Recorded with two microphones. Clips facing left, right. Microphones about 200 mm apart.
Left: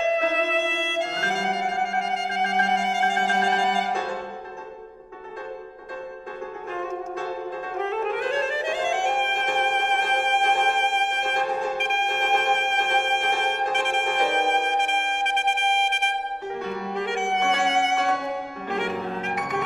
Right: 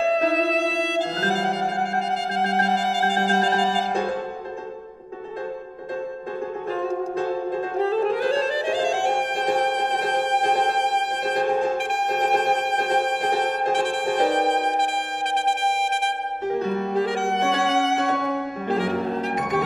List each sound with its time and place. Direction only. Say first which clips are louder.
0.0 s music: right 3 dB; 35° right (ahead or behind)
6.7 s music: right 5 dB; 35° right (ahead or behind)